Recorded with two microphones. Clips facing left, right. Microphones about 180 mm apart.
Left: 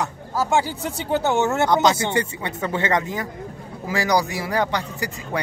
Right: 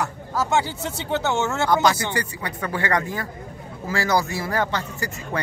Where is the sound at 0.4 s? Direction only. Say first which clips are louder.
Left 1 dB; 10° left (ahead or behind).